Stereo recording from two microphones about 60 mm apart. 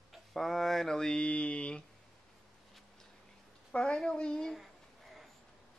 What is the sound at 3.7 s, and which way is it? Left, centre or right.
Mantra, centre.